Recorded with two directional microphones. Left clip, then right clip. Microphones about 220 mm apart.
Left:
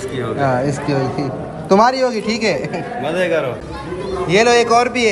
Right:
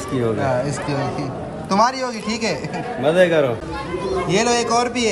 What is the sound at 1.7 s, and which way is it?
Speech, 10° right (ahead or behind).